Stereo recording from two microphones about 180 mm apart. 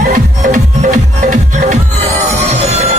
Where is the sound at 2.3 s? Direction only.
35° right (ahead or behind).